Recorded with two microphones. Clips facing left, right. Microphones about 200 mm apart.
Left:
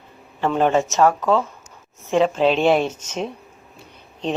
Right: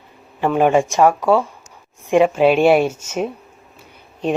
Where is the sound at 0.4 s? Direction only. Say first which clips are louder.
Right 3 dB; 10° right (ahead or behind).